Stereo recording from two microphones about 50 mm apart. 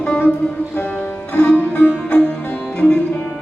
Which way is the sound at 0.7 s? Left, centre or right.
Left.